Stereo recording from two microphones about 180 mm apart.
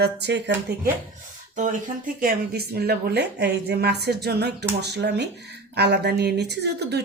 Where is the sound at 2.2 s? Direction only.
60° right (ahead or behind).